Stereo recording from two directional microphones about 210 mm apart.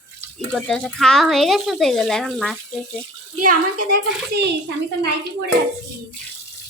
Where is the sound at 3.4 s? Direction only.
45° right (ahead or behind).